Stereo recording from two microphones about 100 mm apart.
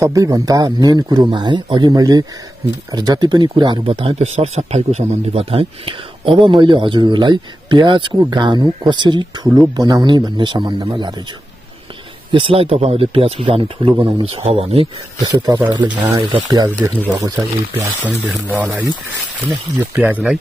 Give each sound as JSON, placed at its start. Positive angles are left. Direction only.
{"t": 0.0, "sound": "a man's voice", "side_deg": -35}
{"t": 12.3, "sound": "speech", "side_deg": -65}
{"t": 15.1, "sound": "speech", "side_deg": -45}
{"t": 16.4, "sound": "a man's voice", "side_deg": -35}
{"t": 20.0, "sound": "speech", "side_deg": -15}